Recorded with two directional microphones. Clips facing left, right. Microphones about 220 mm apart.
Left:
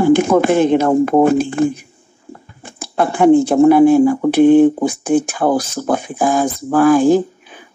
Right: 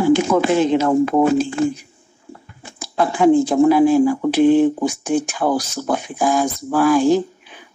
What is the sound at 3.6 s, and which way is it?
Speech, 60° left (ahead or behind).